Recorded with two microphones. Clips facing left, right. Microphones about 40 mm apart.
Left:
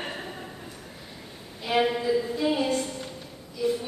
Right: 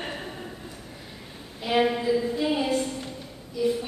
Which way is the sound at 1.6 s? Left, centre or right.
Centre.